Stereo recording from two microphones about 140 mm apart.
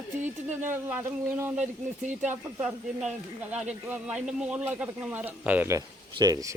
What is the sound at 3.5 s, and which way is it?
Speech, 10° right (ahead or behind).